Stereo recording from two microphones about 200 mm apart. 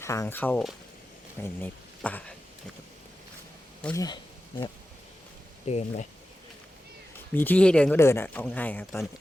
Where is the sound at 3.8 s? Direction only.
15° left (ahead or behind).